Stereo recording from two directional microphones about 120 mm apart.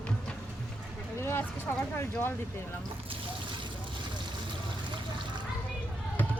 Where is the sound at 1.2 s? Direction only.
20° left (ahead or behind).